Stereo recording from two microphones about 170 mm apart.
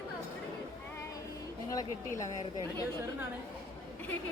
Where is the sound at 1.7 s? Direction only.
20° left (ahead or behind).